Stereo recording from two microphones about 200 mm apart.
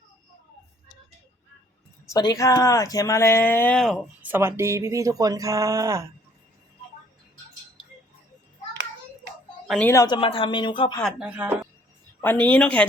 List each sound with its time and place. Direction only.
2.0 s speech: 20° left (ahead or behind); by 6.1 s 15° right (ahead or behind)
9.6 s a woman's voice: 5° left (ahead or behind)
9.9 s speech: 20° left (ahead or behind)
11.0 s speech: 5° right (ahead or behind)
12.2 s speech: 10° left (ahead or behind)